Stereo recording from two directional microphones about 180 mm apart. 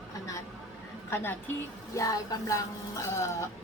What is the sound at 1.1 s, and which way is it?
A woman's voice, 10° left (ahead or behind).